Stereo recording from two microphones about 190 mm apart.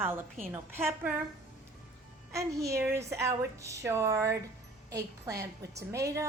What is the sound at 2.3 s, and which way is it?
A woman's voice, 15° right (ahead or behind).